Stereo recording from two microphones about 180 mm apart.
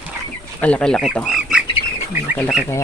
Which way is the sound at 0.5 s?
5° left (ahead or behind).